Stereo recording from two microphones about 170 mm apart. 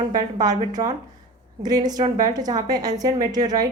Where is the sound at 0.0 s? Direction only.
25° right (ahead or behind).